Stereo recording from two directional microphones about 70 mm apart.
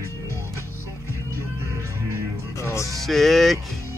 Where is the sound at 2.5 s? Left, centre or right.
Left.